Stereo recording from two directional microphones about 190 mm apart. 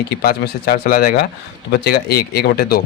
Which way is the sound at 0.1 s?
55° left (ahead or behind).